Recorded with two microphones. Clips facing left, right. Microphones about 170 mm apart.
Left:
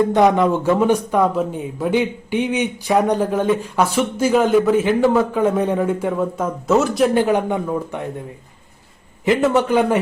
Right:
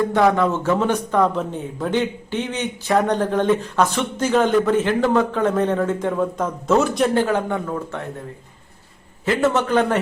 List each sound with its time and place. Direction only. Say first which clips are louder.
0.0 s speech: left 3 dB; 20° left (ahead or behind); by 7.1 s 5° left (ahead or behind)
7.1 s speech: left 3 dB; 15° left (ahead or behind)
9.2 s speech: left 3 dB; 15° left (ahead or behind)